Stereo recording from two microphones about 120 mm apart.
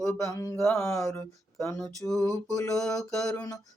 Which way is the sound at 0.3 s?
30° left (ahead or behind).